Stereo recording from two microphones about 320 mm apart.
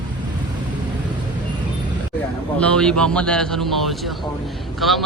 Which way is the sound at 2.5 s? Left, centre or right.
Centre.